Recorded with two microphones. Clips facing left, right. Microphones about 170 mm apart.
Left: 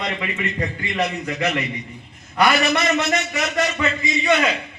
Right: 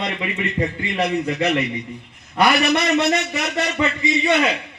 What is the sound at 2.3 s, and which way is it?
A man's voice, 30° right (ahead or behind).